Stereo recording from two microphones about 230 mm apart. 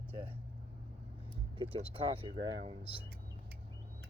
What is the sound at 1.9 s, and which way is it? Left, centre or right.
Speech, right.